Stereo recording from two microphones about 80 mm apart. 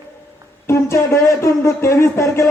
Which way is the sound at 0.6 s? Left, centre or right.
Left.